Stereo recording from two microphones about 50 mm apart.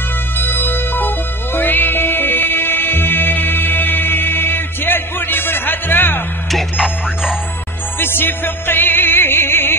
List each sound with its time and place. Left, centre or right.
0.4 s music: left
6.5 s music: centre
8.0 s music: left